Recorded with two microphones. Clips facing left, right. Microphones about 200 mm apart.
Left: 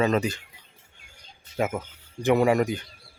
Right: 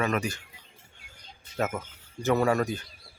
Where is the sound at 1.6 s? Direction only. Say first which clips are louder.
Left 3 dB; 10° left (ahead or behind).